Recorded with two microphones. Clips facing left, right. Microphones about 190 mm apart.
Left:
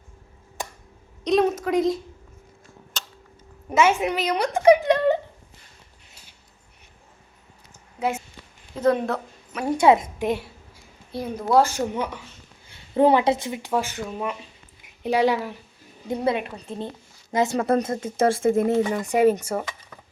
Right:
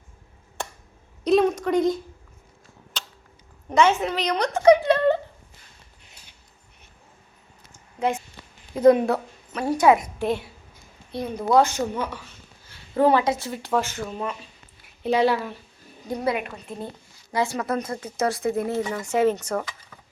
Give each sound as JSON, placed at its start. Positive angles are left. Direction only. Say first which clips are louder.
{"t": 1.2, "sound": "a sound", "louder": "right 1 dB", "side_deg": 0}
{"t": 3.7, "sound": "speech", "louder": "even", "side_deg": 10}
{"t": 7.9, "sound": "speech", "louder": "right 1 dB", "side_deg": 5}
{"t": 8.7, "sound": "speech", "louder": "right 5 dB", "side_deg": -15}
{"t": 9.6, "sound": "speech", "louder": "left 1 dB", "side_deg": 25}
{"t": 11.5, "sound": "a woman's voice", "louder": "even", "side_deg": 15}
{"t": 16.0, "sound": "speech", "louder": "left 2 dB", "side_deg": 25}